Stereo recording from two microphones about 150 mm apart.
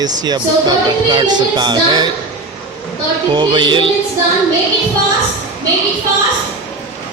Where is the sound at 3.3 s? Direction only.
30° right (ahead or behind).